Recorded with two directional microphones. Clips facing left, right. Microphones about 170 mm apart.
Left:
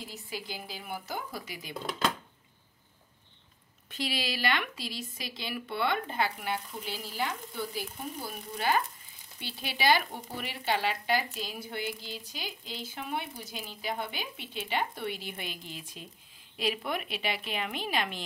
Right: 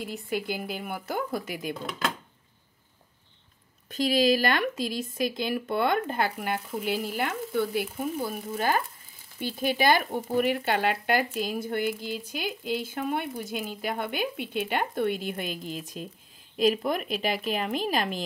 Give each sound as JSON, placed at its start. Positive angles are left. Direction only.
{"t": 0.0, "sound": "speech", "side_deg": -55}
{"t": 3.9, "sound": "speech", "side_deg": -45}